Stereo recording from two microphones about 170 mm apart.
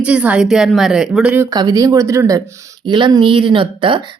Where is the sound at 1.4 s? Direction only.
20° right (ahead or behind).